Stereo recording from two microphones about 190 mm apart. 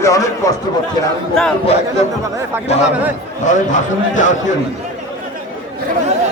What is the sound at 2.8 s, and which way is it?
Speech, 10° right (ahead or behind).